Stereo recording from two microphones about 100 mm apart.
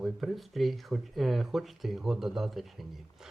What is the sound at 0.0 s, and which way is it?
Speech, centre (ahead or behind).